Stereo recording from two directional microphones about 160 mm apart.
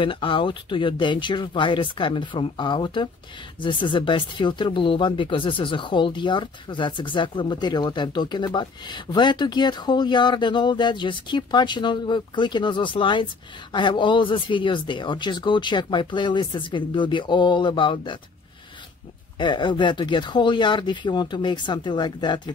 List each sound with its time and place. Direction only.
0.0 s speech: 30° left (ahead or behind)
19.3 s speech: 30° left (ahead or behind)